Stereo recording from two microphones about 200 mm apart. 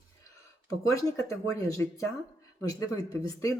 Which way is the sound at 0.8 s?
15° left (ahead or behind).